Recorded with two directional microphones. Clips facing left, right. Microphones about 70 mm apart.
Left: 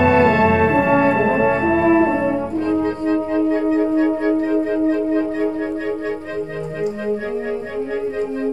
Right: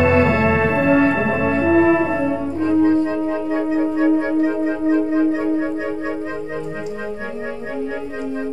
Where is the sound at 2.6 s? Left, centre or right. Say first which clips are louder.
Right 6 dB; centre.